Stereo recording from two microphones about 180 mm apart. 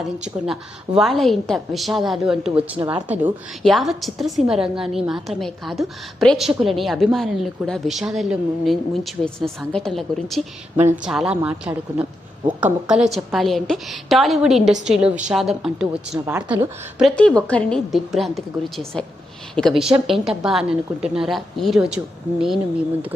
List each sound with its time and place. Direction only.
0.4 s a woman's voice: centre (ahead or behind)
2.7 s a woman's voice: 25° right (ahead or behind)
3.6 s a woman's voice: centre (ahead or behind)
17.0 s a woman's voice: 5° left (ahead or behind)